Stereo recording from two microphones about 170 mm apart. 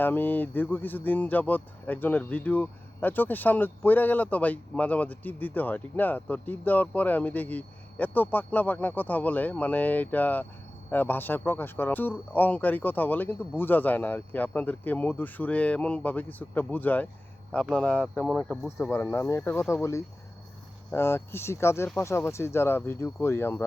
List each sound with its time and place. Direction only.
0.0 s speech: 10° left (ahead or behind)
18.9 s speech: 10° left (ahead or behind)